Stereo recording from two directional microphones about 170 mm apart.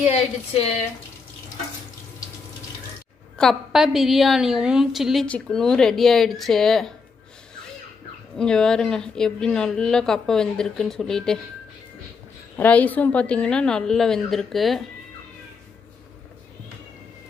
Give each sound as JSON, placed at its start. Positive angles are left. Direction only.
{"t": 0.0, "sound": "speech", "side_deg": 40}
{"t": 3.3, "sound": "a woman's voice", "side_deg": 0}
{"t": 8.4, "sound": "a woman's voice", "side_deg": 5}
{"t": 12.5, "sound": "a woman's voice", "side_deg": 10}